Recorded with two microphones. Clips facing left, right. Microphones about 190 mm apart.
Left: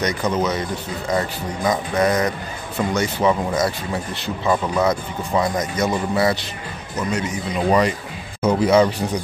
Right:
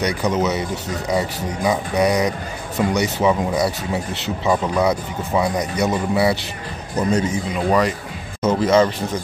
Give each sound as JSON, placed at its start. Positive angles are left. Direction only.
{"t": 0.0, "sound": "speech", "side_deg": -10}
{"t": 7.0, "sound": "a man's voice", "side_deg": -35}
{"t": 8.5, "sound": "speech", "side_deg": 10}